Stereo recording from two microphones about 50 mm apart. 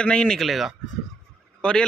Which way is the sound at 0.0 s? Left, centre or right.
Centre.